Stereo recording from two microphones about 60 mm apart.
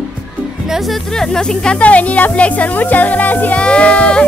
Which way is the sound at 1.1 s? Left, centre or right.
Centre.